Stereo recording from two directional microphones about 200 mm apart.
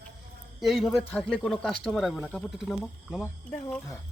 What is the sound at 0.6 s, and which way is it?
Speech, centre (ahead or behind).